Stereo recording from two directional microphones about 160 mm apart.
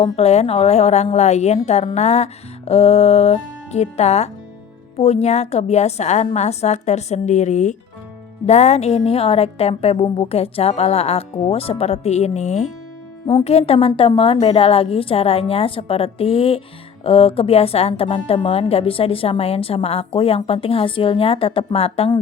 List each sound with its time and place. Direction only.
0.0 s a woman's voice: 40° left (ahead or behind)